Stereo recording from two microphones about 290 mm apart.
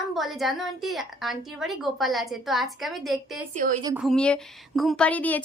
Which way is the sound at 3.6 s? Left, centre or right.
Right.